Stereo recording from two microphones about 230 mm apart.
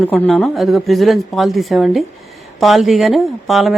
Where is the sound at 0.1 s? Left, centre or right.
Centre.